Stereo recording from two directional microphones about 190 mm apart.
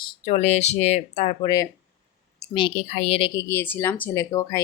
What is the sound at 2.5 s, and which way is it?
Speech, 30° left (ahead or behind).